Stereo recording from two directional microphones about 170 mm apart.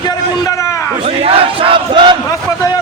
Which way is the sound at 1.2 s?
30° right (ahead or behind).